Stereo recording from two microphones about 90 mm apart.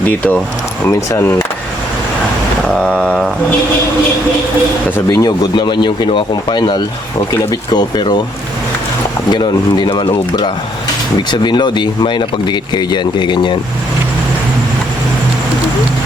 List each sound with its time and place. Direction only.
0.1 s speech: 15° left (ahead or behind)
0.9 s speech: 35° left (ahead or behind)
2.8 s a sound: 10° left (ahead or behind)
5.0 s speech: 45° left (ahead or behind)
9.3 s speech: 55° left (ahead or behind)